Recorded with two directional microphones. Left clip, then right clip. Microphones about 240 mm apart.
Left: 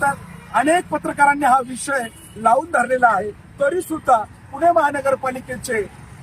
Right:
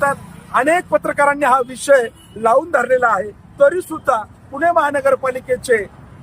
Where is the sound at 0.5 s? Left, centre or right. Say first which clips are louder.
Right 3 dB; centre.